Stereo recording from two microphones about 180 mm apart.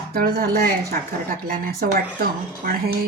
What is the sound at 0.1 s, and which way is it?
Speech, 60° right (ahead or behind).